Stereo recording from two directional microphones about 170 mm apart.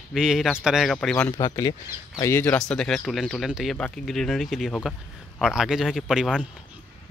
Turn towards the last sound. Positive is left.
turn(degrees=-5)  # may be behind; listen again after turning